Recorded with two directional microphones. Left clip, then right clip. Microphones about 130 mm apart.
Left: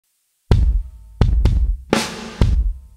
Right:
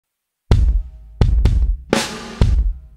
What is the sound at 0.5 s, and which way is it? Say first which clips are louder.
Music: even; centre (ahead or behind).